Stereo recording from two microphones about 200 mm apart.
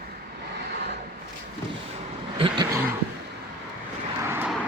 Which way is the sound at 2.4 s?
20° right (ahead or behind).